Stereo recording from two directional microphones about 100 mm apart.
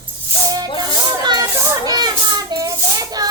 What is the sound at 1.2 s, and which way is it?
Children playing, 40° right (ahead or behind).